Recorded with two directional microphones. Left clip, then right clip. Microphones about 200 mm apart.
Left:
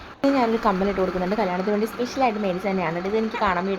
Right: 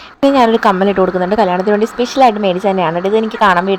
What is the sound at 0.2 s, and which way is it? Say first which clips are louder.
A woman's voice: right 11 dB; 35° right (ahead or behind).